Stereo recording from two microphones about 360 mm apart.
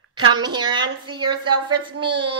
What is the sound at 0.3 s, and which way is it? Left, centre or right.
Speech, centre.